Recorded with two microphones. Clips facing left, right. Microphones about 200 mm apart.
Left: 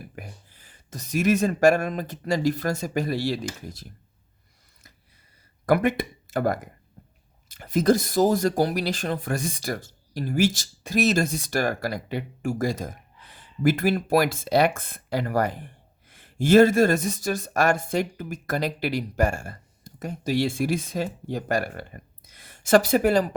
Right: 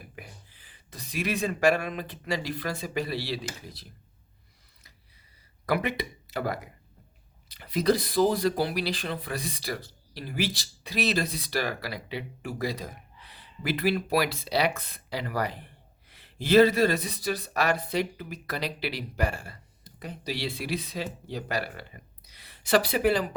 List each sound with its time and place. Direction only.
0.2 s speech: 45° left (ahead or behind)
5.6 s speech: 50° left (ahead or behind)